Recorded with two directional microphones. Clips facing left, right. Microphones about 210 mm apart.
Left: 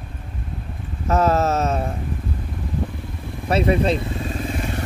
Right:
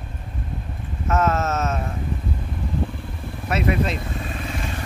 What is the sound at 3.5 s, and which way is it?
Speech, 30° left (ahead or behind).